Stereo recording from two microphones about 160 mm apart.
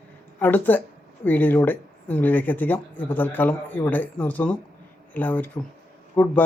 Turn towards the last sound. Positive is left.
turn(degrees=10)  # may be behind; listen again after turning